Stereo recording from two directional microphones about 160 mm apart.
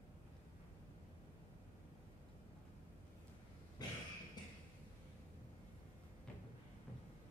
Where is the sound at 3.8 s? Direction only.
25° left (ahead or behind).